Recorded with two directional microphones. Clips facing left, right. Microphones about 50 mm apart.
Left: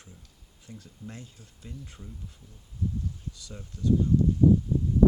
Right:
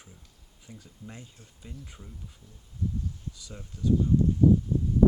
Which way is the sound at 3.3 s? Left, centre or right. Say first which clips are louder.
Left 1 dB; centre.